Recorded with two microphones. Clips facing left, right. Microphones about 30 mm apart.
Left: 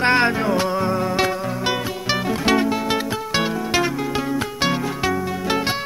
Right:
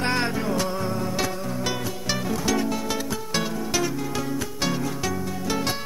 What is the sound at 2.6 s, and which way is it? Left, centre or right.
Music, left.